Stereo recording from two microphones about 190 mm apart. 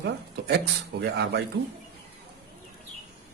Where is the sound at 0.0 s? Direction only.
60° right (ahead or behind).